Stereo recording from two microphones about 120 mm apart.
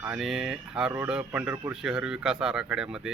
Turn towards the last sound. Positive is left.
turn(degrees=-5)  # may be behind; listen again after turning